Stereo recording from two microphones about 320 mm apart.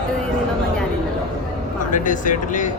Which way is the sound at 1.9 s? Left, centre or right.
Left.